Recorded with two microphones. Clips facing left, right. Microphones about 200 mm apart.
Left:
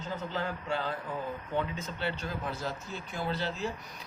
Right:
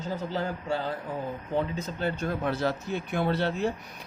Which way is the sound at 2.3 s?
70° right (ahead or behind).